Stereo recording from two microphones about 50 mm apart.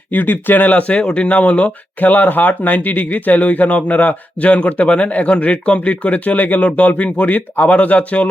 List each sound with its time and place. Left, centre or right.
0.1 s speech: left